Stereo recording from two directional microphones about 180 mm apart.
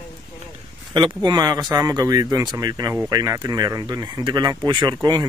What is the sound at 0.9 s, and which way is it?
Speech, 25° right (ahead or behind).